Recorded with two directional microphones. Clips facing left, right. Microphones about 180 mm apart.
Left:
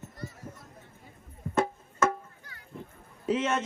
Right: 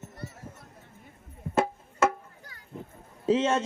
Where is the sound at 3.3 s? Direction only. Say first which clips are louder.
Right 4 dB; 30° right (ahead or behind).